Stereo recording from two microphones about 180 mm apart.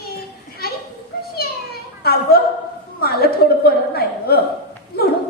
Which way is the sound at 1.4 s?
60° left (ahead or behind).